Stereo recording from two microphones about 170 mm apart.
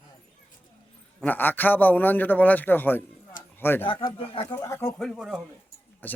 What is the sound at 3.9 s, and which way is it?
Speech, 30° left (ahead or behind).